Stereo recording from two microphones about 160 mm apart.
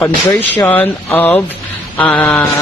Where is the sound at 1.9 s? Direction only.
10° left (ahead or behind).